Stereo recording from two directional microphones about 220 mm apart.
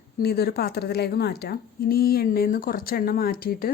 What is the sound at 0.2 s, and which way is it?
A woman's voice, 45° left (ahead or behind).